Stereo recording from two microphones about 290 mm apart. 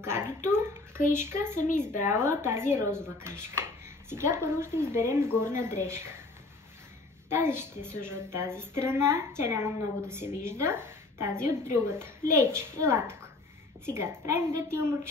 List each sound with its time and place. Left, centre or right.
0.0 s a child's voice: centre
1.9 s a woman's voice: left
2.2 s a woman's voice: centre
7.2 s a woman's voice: centre